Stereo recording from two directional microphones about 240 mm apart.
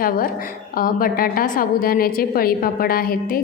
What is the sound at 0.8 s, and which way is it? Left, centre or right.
A woman's voice, left.